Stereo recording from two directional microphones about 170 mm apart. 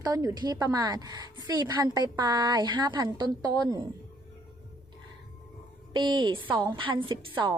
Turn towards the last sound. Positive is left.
turn(degrees=-30)  # may be behind; listen again after turning